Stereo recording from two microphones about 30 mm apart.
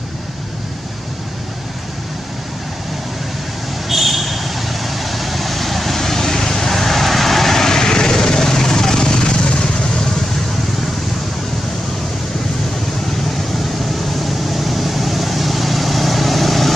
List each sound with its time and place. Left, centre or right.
3.9 s vehicle: centre; by 10.0 s left
14.2 s vehicle: centre